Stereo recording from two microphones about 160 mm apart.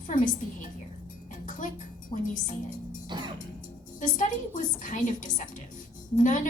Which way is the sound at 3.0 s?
30° right (ahead or behind).